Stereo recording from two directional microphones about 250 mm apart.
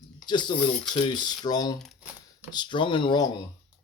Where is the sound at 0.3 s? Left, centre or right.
Centre.